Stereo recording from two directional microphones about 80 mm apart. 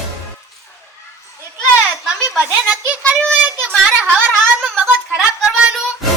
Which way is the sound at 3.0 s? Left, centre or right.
Centre.